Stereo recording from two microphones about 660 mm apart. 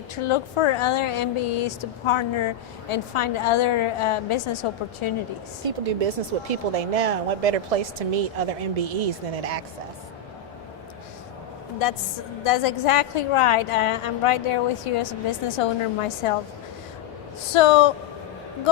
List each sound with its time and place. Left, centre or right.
0.3 s speech: left
5.6 s speech: right
12.5 s speech: left
17.5 s speech: left